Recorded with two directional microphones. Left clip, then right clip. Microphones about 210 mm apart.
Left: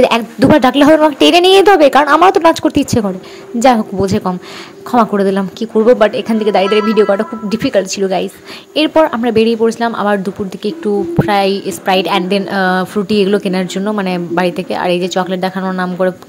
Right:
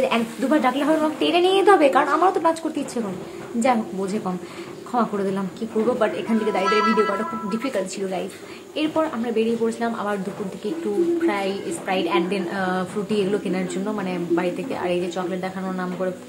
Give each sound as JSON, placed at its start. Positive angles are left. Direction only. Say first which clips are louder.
{"t": 0.1, "sound": "a woman's voice", "louder": "left 11 dB", "side_deg": 45}
{"t": 6.6, "sound": "speech", "louder": "left 7 dB", "side_deg": 0}
{"t": 7.0, "sound": "a woman's voice", "louder": "left 10 dB", "side_deg": 40}
{"t": 11.2, "sound": "a woman's voice", "louder": "left 11 dB", "side_deg": 40}